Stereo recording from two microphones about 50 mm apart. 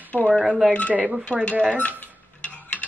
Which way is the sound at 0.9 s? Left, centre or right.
Right.